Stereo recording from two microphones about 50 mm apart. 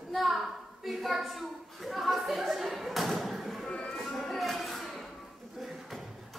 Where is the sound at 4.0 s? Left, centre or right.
Centre.